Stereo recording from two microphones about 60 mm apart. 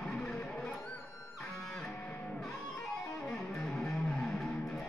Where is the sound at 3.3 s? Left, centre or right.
Centre.